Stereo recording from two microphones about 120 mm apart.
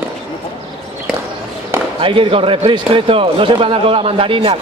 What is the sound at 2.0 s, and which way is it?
Speech, 45° right (ahead or behind).